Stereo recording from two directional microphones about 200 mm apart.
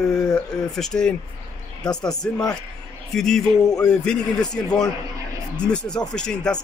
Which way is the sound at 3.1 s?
Centre (ahead or behind).